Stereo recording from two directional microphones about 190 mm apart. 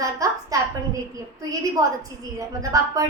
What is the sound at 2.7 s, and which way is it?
Speech, 20° right (ahead or behind).